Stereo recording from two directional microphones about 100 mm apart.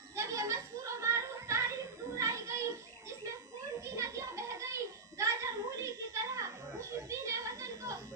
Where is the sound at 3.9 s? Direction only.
30° right (ahead or behind).